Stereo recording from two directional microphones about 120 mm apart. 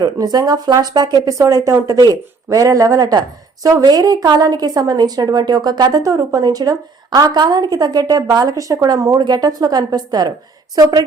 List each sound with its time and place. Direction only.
0.0 s speech: 35° right (ahead or behind)